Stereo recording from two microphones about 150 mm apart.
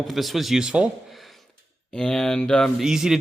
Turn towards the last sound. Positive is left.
turn(degrees=-5)  # may be behind; listen again after turning